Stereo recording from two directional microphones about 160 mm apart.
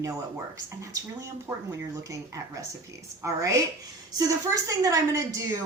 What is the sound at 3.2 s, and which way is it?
A woman's voice, 20° right (ahead or behind).